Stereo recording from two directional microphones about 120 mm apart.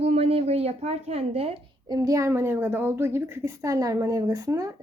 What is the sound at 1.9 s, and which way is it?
A woman's voice, 30° right (ahead or behind).